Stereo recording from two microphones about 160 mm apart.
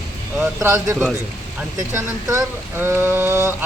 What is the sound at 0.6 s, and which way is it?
Rain on surface, 15° right (ahead or behind).